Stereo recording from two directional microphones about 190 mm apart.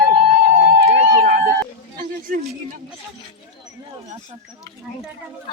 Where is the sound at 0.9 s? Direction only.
55° right (ahead or behind).